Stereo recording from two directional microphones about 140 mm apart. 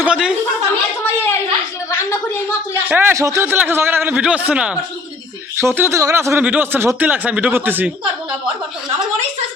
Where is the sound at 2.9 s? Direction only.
15° right (ahead or behind).